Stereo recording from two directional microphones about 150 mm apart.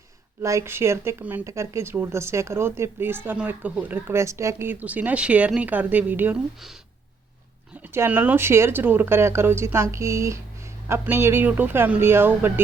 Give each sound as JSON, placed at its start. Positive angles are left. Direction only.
{"t": 0.4, "sound": "speech", "side_deg": -20}
{"t": 7.9, "sound": "speech", "side_deg": -15}